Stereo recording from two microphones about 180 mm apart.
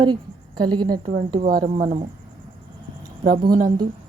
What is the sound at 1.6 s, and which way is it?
Speech, 45° right (ahead or behind).